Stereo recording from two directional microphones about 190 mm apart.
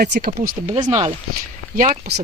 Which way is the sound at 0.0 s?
55° right (ahead or behind).